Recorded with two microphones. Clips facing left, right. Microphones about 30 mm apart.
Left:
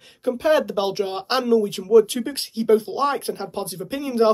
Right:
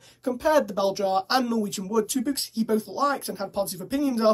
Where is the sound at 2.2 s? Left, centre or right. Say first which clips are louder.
Even; left.